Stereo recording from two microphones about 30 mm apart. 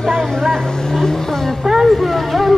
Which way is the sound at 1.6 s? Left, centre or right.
Centre.